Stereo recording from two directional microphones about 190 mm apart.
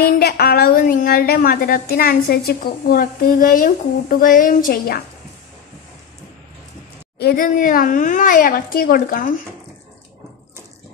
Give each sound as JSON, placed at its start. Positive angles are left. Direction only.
{"t": 0.0, "sound": "a woman's voice", "side_deg": 55}
{"t": 7.2, "sound": "a woman's voice", "side_deg": 50}